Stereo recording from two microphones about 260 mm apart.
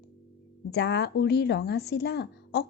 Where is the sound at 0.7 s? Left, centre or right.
Left.